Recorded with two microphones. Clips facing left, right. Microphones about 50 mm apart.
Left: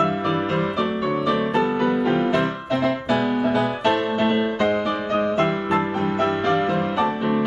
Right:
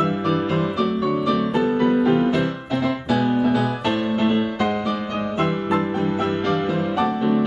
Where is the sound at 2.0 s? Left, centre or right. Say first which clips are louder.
Right 2 dB; left.